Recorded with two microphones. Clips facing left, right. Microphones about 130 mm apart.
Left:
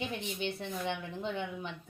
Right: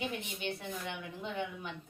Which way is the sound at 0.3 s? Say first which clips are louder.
Left 3 dB; 25° left (ahead or behind).